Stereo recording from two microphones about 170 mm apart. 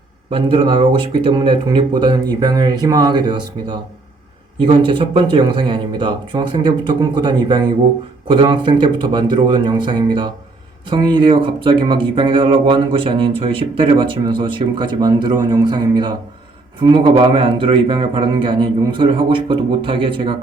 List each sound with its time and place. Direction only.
0.3 s speech: 30° right (ahead or behind)